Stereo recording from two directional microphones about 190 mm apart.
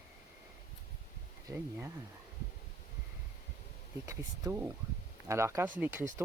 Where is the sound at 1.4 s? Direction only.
15° right (ahead or behind).